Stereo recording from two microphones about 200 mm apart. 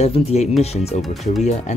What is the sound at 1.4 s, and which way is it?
Speech, 35° left (ahead or behind).